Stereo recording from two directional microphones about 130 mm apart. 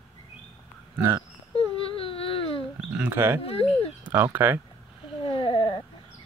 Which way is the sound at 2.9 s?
15° right (ahead or behind).